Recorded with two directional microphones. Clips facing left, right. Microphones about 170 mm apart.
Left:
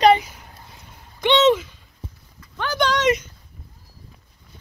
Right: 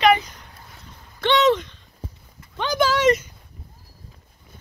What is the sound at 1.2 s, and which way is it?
Speech, 15° left (ahead or behind).